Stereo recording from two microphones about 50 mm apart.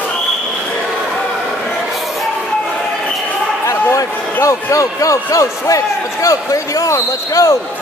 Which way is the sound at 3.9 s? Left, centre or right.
Left.